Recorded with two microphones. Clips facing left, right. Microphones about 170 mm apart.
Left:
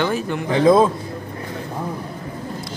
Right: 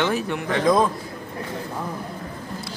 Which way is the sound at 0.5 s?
25° left (ahead or behind).